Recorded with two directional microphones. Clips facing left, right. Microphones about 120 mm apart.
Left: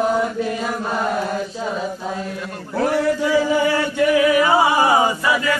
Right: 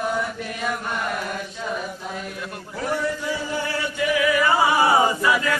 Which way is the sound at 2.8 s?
85° left.